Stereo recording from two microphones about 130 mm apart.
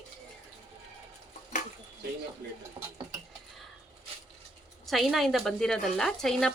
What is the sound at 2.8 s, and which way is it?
Stir, 35° right (ahead or behind).